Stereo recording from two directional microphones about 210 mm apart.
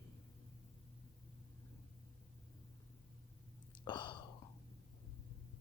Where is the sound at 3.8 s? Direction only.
20° left (ahead or behind).